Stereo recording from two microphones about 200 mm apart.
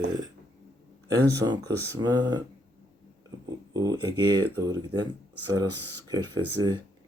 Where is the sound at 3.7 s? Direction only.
20° right (ahead or behind).